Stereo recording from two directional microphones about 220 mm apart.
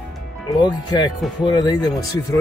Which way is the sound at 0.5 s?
20° left (ahead or behind).